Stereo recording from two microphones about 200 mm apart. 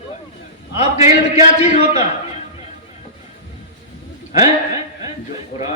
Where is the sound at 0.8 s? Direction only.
30° left (ahead or behind).